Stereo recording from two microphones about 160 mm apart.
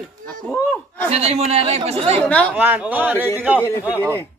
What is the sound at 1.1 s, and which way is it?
Speech, 40° right (ahead or behind).